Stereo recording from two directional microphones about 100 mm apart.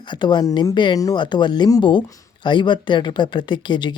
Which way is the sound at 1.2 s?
50° left (ahead or behind).